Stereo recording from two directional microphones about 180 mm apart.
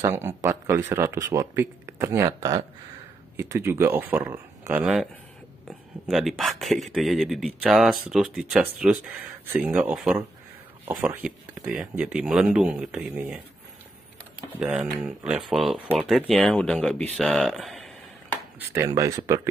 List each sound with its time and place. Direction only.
0.0 s speech: 15° right (ahead or behind)
14.6 s speech: 5° right (ahead or behind)
18.6 s speech: 15° right (ahead or behind)